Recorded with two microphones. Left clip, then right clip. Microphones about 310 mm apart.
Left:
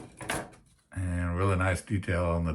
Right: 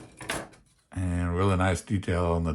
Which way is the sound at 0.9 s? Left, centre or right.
Centre.